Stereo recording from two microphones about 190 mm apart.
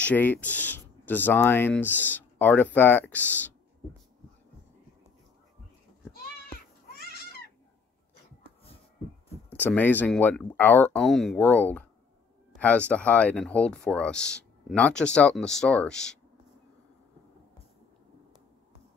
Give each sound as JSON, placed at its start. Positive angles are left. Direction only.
{"t": 0.0, "sound": "speech", "side_deg": 10}
{"t": 6.5, "sound": "a sound", "side_deg": 55}
{"t": 9.5, "sound": "speech", "side_deg": 10}